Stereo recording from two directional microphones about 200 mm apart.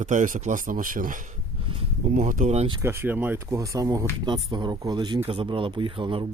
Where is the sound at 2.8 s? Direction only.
10° right (ahead or behind).